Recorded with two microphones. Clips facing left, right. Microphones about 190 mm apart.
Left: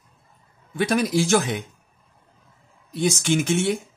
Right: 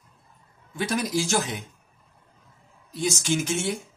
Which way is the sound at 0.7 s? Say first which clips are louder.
Left 5 dB; 60° left (ahead or behind).